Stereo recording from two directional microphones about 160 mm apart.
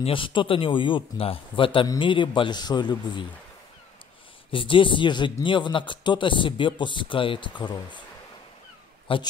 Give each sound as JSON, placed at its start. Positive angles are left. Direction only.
{"t": 0.0, "sound": "speech", "side_deg": 35}
{"t": 4.5, "sound": "speech", "side_deg": 35}
{"t": 9.0, "sound": "a man's voice", "side_deg": 30}